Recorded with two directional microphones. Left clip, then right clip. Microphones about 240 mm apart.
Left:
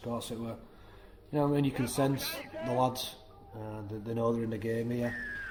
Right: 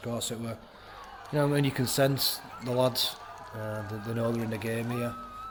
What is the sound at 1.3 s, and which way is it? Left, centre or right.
Speech, right.